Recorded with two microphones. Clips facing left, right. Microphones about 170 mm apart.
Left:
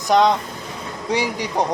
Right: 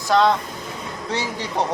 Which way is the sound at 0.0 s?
20° left (ahead or behind).